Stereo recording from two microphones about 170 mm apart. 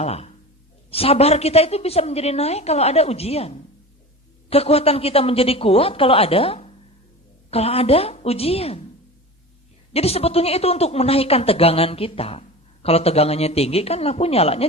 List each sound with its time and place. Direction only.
0.0 s speech: 35° left (ahead or behind)
9.9 s speech: 35° left (ahead or behind)